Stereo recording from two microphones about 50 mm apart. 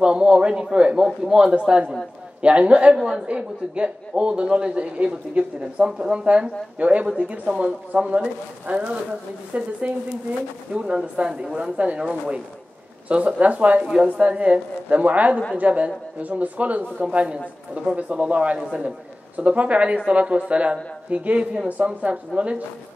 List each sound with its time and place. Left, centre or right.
0.0 s a man's voice: centre
3.0 s a man's voice: centre
3.3 s a man's voice: right
18.6 s a man's voice: centre
19.3 s a man's voice: right